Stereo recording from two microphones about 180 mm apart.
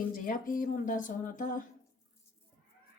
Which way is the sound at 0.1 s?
50° left (ahead or behind).